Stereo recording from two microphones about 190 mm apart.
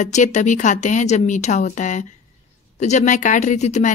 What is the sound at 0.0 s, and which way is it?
Speech, 40° left (ahead or behind).